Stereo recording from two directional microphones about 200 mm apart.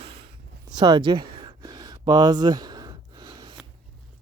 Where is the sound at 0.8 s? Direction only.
20° right (ahead or behind).